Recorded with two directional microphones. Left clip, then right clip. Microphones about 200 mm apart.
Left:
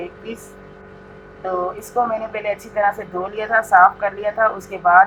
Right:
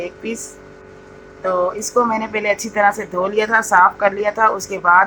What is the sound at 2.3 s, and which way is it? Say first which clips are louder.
Speech: right 4 dB; 55° right (ahead or behind).